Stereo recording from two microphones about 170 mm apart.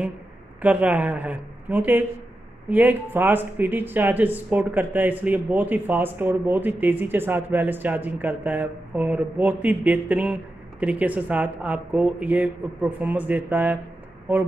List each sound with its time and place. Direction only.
0.6 s speech: 10° right (ahead or behind)